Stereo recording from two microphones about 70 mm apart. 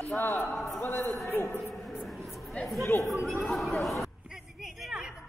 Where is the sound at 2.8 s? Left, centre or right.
Left.